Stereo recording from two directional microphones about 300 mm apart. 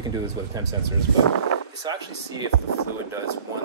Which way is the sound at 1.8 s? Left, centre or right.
Centre.